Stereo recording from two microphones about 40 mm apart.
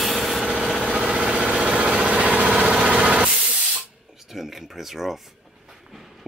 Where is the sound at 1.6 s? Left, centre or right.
Right.